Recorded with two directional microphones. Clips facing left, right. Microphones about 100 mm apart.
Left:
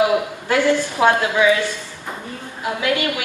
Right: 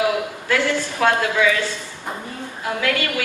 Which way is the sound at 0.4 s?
20° left (ahead or behind).